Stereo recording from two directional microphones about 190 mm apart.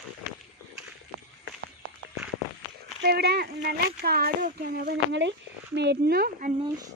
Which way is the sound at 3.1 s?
60° right (ahead or behind).